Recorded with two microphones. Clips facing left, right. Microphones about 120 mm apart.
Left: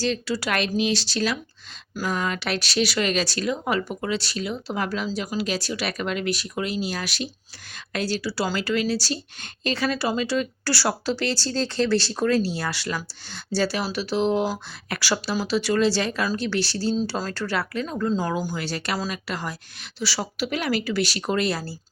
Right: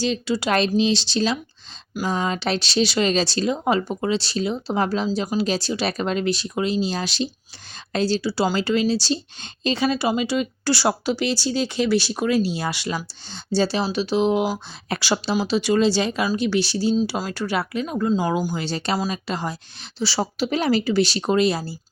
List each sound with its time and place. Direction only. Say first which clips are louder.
0.0 s a woman's voice: right 3 dB; 20° right (ahead or behind)
16.9 s a woman's voice: right 3 dB; 5° right (ahead or behind)